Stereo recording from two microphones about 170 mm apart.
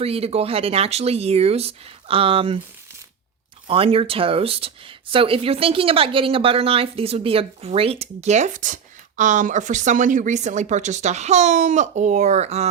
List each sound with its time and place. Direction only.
0.0 s speech: 35° right (ahead or behind)
3.7 s speech: 35° right (ahead or behind)